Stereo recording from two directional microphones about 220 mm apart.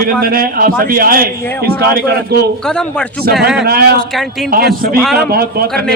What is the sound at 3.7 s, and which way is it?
Speech, 45° right (ahead or behind).